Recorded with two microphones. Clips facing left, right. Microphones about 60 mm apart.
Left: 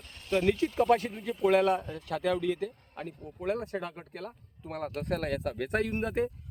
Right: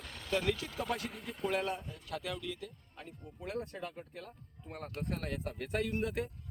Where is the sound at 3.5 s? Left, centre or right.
Left.